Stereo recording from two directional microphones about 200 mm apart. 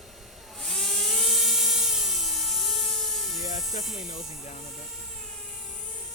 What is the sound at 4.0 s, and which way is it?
Speech, 35° left (ahead or behind).